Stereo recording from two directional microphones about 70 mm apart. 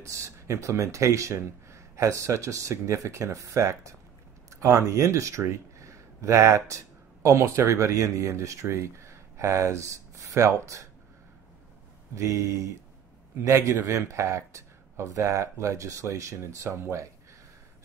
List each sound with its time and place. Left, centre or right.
0.0 s speech: right
12.2 s speech: right